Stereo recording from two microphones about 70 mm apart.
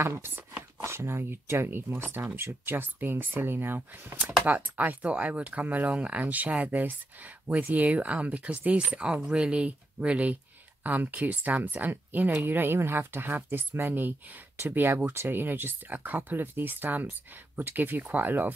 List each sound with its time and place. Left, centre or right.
0.0 s speech: right